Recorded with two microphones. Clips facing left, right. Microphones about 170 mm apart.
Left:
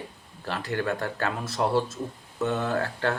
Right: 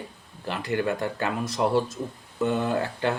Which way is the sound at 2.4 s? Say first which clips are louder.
Right 2 dB; 15° right (ahead or behind).